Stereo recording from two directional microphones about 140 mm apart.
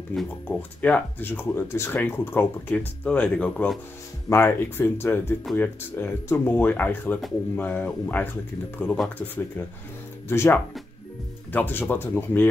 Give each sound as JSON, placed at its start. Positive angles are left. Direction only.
{"t": 0.1, "sound": "speech", "side_deg": 5}
{"t": 10.2, "sound": "speech", "side_deg": 15}